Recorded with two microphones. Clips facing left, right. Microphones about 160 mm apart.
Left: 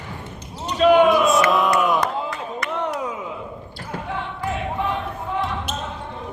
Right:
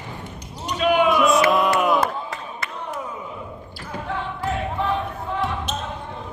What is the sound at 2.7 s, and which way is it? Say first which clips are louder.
Chop: left 7 dB; 85° left.